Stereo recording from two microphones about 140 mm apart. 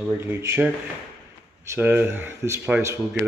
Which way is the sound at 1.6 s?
10° right (ahead or behind).